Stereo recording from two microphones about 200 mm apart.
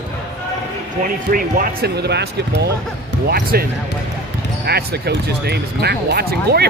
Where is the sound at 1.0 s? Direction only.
45° right (ahead or behind).